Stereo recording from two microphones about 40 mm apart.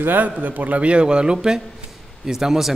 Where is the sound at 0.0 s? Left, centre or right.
Right.